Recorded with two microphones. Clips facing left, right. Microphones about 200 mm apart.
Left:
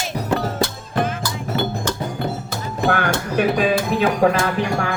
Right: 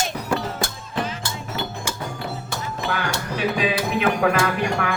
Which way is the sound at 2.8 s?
55° left (ahead or behind).